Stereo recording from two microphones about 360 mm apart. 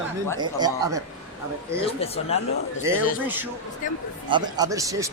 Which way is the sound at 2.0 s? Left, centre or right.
Centre.